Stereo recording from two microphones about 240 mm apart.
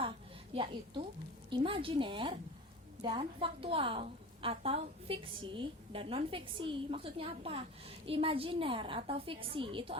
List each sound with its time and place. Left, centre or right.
0.5 s a woman's voice: right